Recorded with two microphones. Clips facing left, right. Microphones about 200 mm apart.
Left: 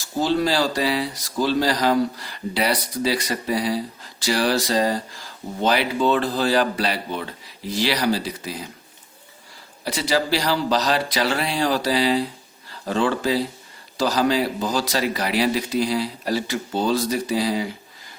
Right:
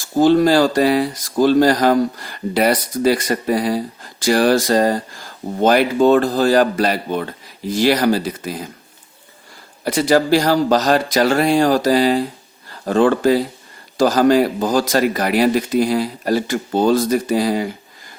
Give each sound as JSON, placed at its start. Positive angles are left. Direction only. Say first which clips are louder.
{"t": 0.0, "sound": "speech", "louder": "right 8 dB", "side_deg": -50}
{"t": 9.8, "sound": "speech", "louder": "right 7 dB", "side_deg": -50}